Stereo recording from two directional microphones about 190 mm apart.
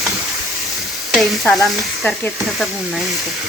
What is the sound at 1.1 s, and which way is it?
Stir, centre (ahead or behind).